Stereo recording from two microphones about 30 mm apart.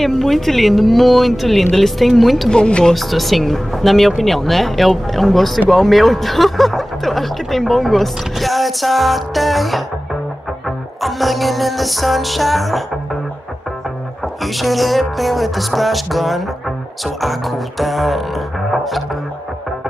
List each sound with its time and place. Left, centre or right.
0.0 s music: centre
2.5 s speech: left
2.9 s music: centre
11.0 s music: centre
14.4 s music: centre